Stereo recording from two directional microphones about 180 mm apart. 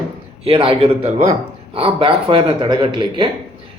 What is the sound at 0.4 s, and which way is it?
A man's voice, 30° right (ahead or behind).